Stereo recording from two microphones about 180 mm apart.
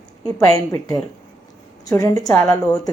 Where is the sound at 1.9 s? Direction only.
20° left (ahead or behind).